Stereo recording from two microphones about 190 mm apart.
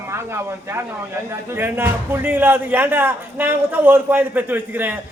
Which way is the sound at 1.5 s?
10° right (ahead or behind).